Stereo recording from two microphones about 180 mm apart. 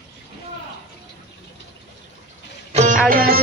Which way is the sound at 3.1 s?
55° right (ahead or behind).